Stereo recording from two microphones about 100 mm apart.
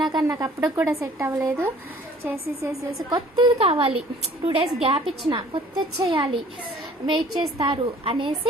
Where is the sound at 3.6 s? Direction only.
75° right (ahead or behind).